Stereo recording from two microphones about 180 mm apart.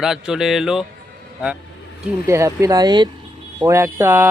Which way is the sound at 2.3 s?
15° right (ahead or behind).